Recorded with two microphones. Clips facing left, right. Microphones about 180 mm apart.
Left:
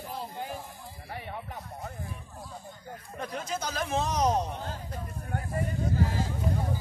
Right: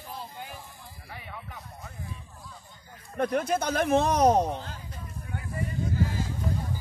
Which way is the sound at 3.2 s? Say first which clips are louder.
Right 9 dB; 60° right (ahead or behind).